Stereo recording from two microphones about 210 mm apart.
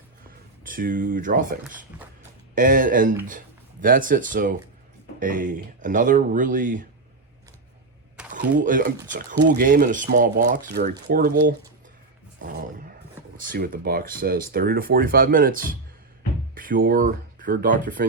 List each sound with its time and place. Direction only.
0.3 s speech: 40° right (ahead or behind)
2.6 s speech: 40° right (ahead or behind)
8.3 s speech: 40° right (ahead or behind)
12.4 s a sound: 40° right (ahead or behind)
13.3 s speech: 40° right (ahead or behind)